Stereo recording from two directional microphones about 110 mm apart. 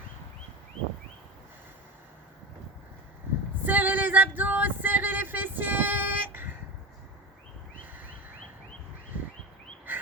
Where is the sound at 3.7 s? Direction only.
15° right (ahead or behind).